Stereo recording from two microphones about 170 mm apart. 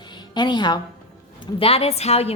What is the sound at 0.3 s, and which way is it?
A woman's voice, 25° left (ahead or behind).